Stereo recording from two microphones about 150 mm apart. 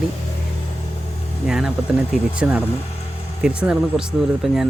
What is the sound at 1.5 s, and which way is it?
Speech, 5° right (ahead or behind).